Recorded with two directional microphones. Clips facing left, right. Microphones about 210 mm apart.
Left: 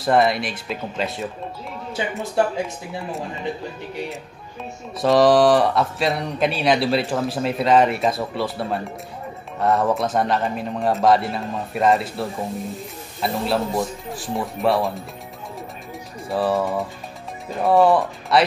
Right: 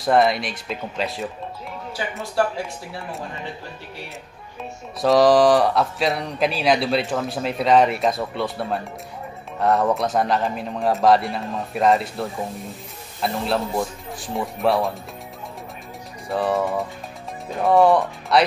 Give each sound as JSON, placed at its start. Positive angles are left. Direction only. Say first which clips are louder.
{"t": 0.0, "sound": "speech", "louder": "even", "side_deg": 0}
{"t": 2.4, "sound": "speech", "louder": "left 1 dB", "side_deg": 20}
{"t": 5.0, "sound": "speech", "louder": "even", "side_deg": 0}
{"t": 16.3, "sound": "speech", "louder": "left 1 dB", "side_deg": 0}